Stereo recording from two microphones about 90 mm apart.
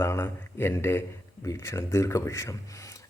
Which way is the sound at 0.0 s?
30° left (ahead or behind).